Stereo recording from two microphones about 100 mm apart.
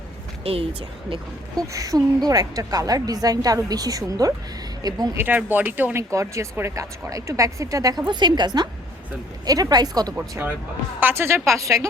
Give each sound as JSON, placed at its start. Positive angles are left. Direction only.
{"t": 0.4, "sound": "speech", "side_deg": -70}
{"t": 1.6, "sound": "a woman's voice", "side_deg": -35}
{"t": 5.1, "sound": "speech", "side_deg": -20}
{"t": 6.0, "sound": "a woman's voice", "side_deg": -30}
{"t": 11.0, "sound": "a woman's voice", "side_deg": -25}